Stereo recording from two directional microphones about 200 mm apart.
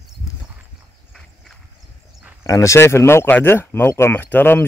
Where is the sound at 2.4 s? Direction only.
15° left (ahead or behind).